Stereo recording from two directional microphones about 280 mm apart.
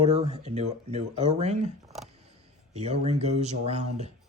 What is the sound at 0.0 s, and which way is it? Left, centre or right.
Speech, right.